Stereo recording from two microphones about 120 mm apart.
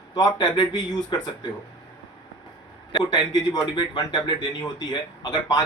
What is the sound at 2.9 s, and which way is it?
Speech, 35° left (ahead or behind).